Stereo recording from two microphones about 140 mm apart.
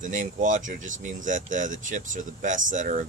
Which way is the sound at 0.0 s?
65° right (ahead or behind).